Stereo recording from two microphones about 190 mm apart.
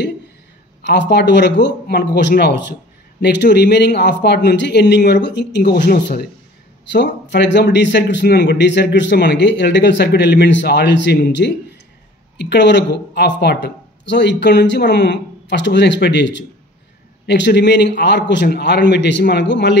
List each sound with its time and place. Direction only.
0.8 s a man's voice: 65° left (ahead or behind)